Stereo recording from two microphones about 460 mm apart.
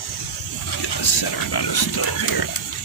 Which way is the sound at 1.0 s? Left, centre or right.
Left.